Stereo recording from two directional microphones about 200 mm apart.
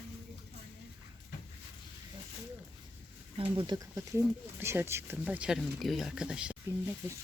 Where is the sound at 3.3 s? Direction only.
25° right (ahead or behind).